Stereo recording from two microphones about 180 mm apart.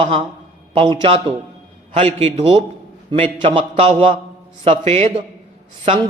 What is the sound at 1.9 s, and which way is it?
A man's voice, 35° right (ahead or behind).